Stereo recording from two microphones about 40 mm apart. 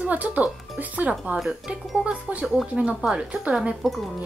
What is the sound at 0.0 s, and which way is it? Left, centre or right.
Speech, right.